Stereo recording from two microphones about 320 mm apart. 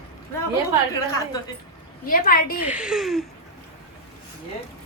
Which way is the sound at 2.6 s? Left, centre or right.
Centre.